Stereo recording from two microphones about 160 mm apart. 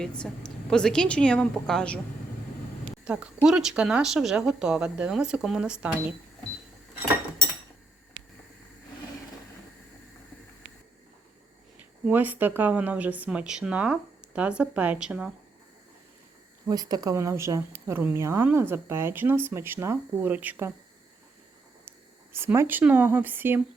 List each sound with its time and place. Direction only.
0.0 s speech: 5° left (ahead or behind)
3.0 s speech: 5° right (ahead or behind)
12.0 s speech: 10° right (ahead or behind)
16.6 s speech: 25° right (ahead or behind)
21.8 s speech: 15° right (ahead or behind)